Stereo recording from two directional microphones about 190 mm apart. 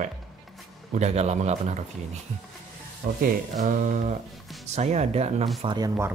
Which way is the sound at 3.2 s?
40° right (ahead or behind).